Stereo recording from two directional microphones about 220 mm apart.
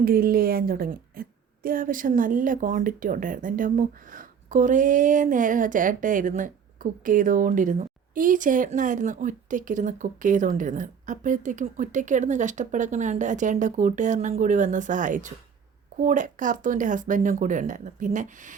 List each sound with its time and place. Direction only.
0.0 s speech: 40° right (ahead or behind)